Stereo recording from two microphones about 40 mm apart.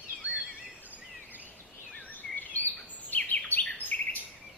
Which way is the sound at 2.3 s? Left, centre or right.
Left.